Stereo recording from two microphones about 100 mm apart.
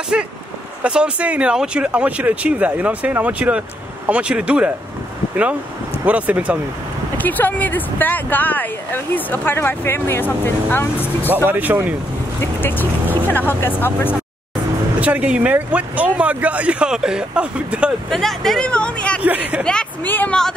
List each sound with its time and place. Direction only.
0.1 s speech: 10° right (ahead or behind)
7.2 s speech: 20° left (ahead or behind)
11.2 s speech: 20° right (ahead or behind)
13.3 s speech: 20° left (ahead or behind)
15.0 s speech: 15° right (ahead or behind)
18.1 s speech: 5° left (ahead or behind)
19.2 s speech: 15° right (ahead or behind)
19.6 s a woman's voice: 10° left (ahead or behind)
20.1 s speech: 20° left (ahead or behind)